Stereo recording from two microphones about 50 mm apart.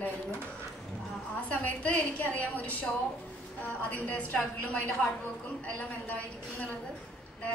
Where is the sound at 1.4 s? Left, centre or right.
Left.